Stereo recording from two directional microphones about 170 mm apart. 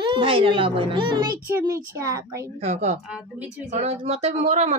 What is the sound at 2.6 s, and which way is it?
Speech, 40° right (ahead or behind).